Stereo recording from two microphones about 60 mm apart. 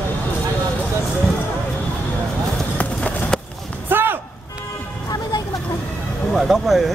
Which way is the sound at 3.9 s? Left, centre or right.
Right.